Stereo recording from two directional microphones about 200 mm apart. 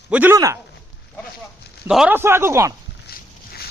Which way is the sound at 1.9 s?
5° right (ahead or behind).